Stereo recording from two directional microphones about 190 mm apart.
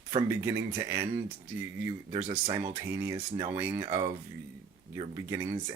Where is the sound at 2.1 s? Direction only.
35° right (ahead or behind).